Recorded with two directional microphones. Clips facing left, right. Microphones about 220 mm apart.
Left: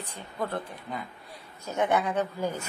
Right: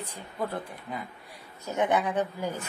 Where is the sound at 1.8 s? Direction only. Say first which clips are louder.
Even; 15° right (ahead or behind).